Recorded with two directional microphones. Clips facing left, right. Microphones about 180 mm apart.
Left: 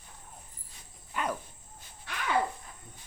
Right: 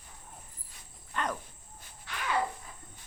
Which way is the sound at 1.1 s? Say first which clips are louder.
Left 1 dB; 10° left (ahead or behind).